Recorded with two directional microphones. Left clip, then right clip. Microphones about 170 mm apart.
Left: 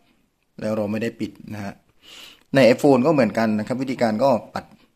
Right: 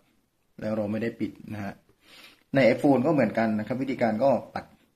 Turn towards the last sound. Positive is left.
turn(degrees=30)  # may be behind; listen again after turning